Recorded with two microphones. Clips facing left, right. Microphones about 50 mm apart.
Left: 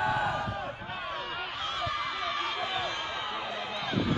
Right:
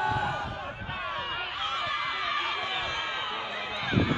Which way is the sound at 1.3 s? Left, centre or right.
Centre.